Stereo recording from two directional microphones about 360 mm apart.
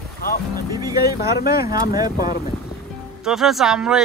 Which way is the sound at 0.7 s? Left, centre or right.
Centre.